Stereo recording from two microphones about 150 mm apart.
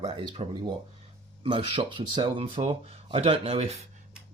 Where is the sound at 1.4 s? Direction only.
35° right (ahead or behind).